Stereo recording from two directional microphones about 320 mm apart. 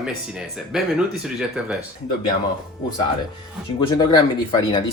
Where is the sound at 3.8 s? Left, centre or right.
Centre.